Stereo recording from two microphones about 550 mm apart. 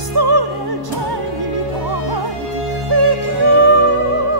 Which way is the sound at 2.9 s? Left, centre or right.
Right.